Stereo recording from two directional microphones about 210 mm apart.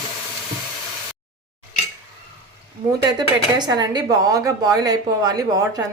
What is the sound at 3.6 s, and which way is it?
A woman's voice, 20° right (ahead or behind).